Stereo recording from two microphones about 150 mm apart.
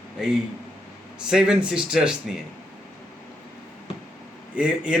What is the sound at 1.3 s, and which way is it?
Speech, 5° right (ahead or behind).